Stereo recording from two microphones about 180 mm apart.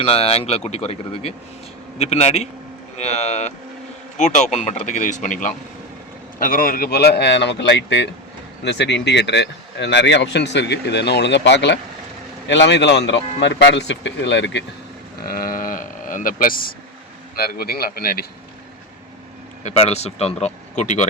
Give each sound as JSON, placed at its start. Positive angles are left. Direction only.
{"t": 0.0, "sound": "a man's voice", "side_deg": 35}
{"t": 15.3, "sound": "a man's voice", "side_deg": 50}
{"t": 19.6, "sound": "speech", "side_deg": 35}